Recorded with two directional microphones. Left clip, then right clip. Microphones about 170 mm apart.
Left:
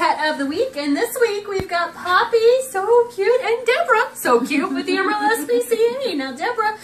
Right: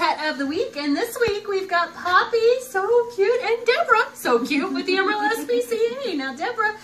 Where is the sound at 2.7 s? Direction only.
5° left (ahead or behind).